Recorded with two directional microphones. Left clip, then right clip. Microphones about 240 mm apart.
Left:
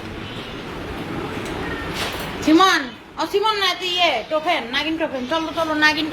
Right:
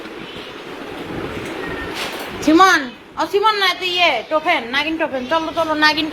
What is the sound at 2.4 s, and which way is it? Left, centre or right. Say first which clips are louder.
A woman's voice: right 3 dB; centre.